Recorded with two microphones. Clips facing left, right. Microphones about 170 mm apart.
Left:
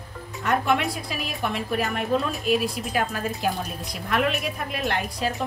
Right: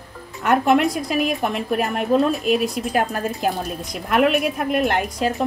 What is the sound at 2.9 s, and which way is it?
A woman's voice, 45° right (ahead or behind).